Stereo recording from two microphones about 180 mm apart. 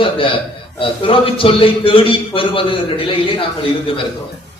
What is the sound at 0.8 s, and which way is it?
A man's voice, 30° left (ahead or behind).